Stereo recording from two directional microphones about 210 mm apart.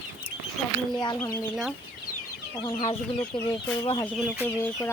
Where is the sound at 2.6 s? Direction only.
20° left (ahead or behind).